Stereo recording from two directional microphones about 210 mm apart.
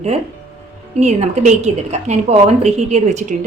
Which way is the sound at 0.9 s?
35° right (ahead or behind).